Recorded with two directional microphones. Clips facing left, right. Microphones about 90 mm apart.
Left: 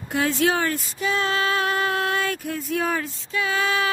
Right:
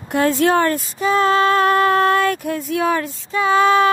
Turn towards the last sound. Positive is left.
turn(degrees=-35)  # may be behind; listen again after turning